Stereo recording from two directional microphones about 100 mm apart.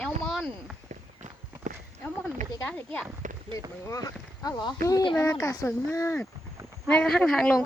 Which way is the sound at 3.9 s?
35° left (ahead or behind).